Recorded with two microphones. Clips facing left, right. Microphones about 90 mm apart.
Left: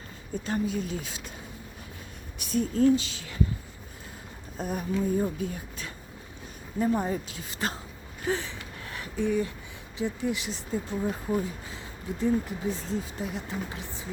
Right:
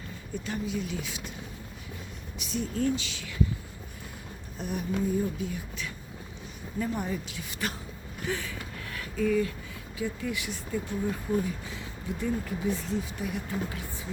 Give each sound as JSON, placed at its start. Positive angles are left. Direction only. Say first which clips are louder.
{"t": 0.4, "sound": "speech", "louder": "left 4 dB", "side_deg": 40}
{"t": 2.4, "sound": "speech", "louder": "left 6 dB", "side_deg": 45}
{"t": 4.5, "sound": "speech", "louder": "left 2 dB", "side_deg": 40}
{"t": 6.7, "sound": "speech", "louder": "left 5 dB", "side_deg": 30}
{"t": 8.2, "sound": "a sound", "louder": "left 3 dB", "side_deg": 30}
{"t": 10.0, "sound": "speech", "louder": "left 3 dB", "side_deg": 25}